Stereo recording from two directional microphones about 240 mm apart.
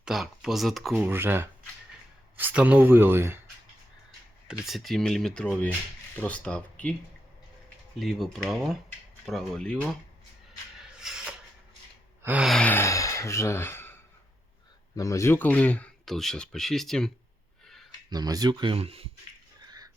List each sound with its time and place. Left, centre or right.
0.0 s speech: centre
4.6 s speech: centre
7.9 s speech: centre
10.8 s shuffle: centre
12.2 s a man's voice: centre
14.9 s speech: centre
18.1 s speech: centre
19.6 s a sound: centre